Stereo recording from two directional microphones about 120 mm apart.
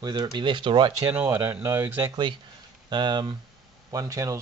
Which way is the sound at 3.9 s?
30° right (ahead or behind).